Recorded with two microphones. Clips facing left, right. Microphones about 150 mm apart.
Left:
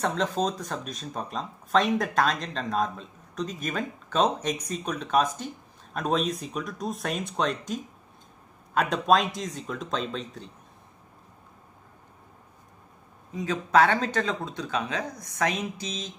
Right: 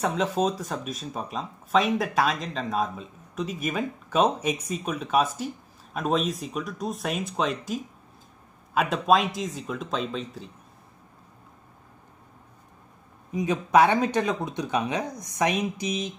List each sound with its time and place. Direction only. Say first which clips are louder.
0.0 s speech: right 2 dB; 5° right (ahead or behind)
13.3 s speech: right 2 dB; 15° right (ahead or behind)